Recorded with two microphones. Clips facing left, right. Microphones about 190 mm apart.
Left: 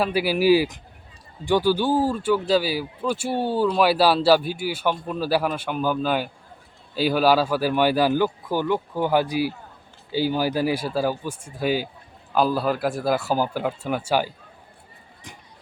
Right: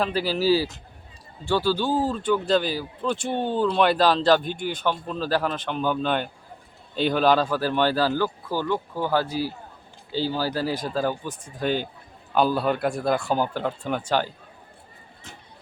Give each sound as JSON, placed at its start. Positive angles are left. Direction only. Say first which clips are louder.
{"t": 0.0, "sound": "a man's voice", "louder": "left 3 dB", "side_deg": 10}